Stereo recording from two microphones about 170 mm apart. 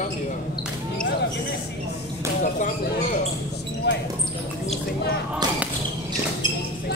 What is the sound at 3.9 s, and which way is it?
Speech, 90° left.